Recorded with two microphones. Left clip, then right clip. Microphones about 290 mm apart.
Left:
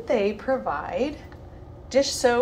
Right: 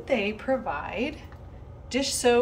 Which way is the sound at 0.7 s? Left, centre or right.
Centre.